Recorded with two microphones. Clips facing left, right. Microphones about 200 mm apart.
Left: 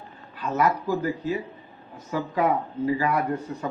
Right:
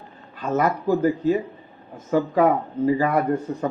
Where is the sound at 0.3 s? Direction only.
50° right (ahead or behind).